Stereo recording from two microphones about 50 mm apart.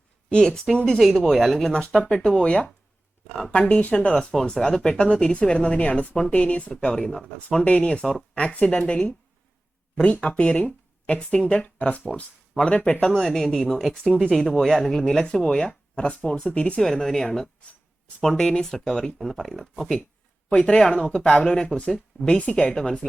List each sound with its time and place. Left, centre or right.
0.3 s speech: centre
7.6 s speech: left
16.8 s speech: centre